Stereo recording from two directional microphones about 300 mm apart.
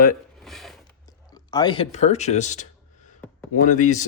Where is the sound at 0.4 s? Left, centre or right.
Centre.